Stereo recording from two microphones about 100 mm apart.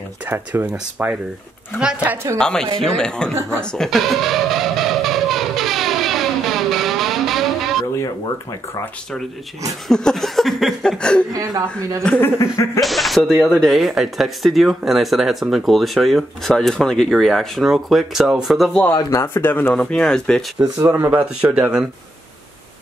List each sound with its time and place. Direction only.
0.3 s speech: 20° right (ahead or behind)
2.3 s speech: 5° left (ahead or behind)
3.7 s music: centre (ahead or behind)
9.8 s speech: 5° left (ahead or behind)
11.3 s a woman's voice: 35° right (ahead or behind)
12.2 s a sound: 30° left (ahead or behind)
12.8 s speech: centre (ahead or behind)
19.1 s a sound: 20° left (ahead or behind)
19.7 s speech: 10° left (ahead or behind)
20.8 s speech: 25° right (ahead or behind)
21.1 s speech: 15° right (ahead or behind)